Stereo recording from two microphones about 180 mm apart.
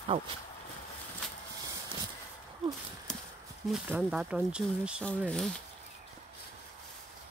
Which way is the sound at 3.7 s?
5° right (ahead or behind).